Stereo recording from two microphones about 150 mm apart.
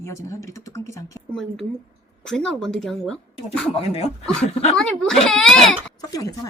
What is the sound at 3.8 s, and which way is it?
Speech, 45° left (ahead or behind).